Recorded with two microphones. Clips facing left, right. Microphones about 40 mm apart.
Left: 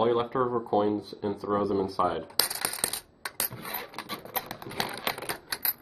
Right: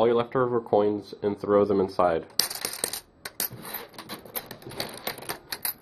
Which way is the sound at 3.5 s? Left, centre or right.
Left.